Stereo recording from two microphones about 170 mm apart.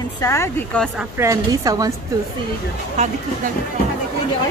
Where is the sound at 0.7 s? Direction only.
5° left (ahead or behind).